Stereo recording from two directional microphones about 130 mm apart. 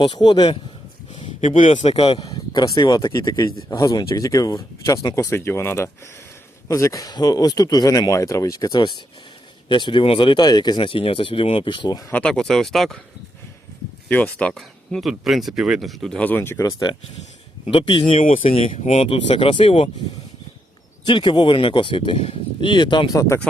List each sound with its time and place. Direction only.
0.0 s speech: 35° left (ahead or behind)
1.5 s a man's voice: 70° left (ahead or behind); by 2.2 s 50° left (ahead or behind)
2.2 s speech: 30° left (ahead or behind)
12.1 s speech: 5° left (ahead or behind)
14.1 s speech: 10° left (ahead or behind)
17.7 s speech: 40° left (ahead or behind)
21.1 s speech: 35° left (ahead or behind)